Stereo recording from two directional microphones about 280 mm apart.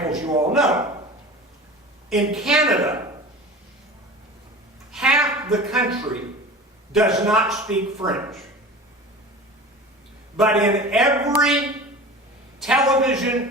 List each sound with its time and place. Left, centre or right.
0.1 s a man's voice: centre
2.0 s a man's voice: centre
4.9 s a woman's voice: centre
6.9 s a man's voice: centre
10.3 s a man's voice: centre
12.6 s a man's voice: centre